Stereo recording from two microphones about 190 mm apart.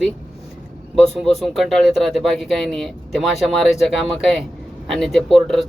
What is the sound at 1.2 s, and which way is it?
Speech, centre (ahead or behind).